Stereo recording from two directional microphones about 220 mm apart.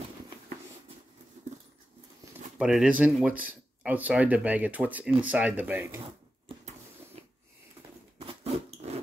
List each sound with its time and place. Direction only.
2.6 s speech: 5° right (ahead or behind)
8.2 s rodents: 25° right (ahead or behind)